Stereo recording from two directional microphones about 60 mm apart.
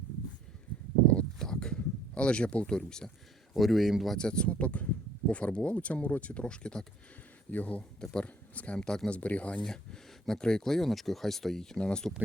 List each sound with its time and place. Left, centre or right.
1.0 s a sound: centre
3.5 s speech: centre
4.2 s speech: centre
9.6 s speech: centre